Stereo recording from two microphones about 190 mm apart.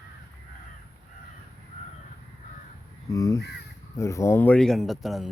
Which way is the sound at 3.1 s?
20° left (ahead or behind).